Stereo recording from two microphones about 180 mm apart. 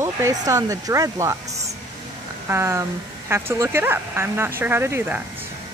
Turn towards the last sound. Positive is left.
turn(degrees=-10)  # may be behind; listen again after turning